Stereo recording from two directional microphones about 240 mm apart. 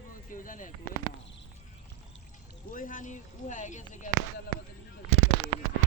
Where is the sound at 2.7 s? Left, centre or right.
Left.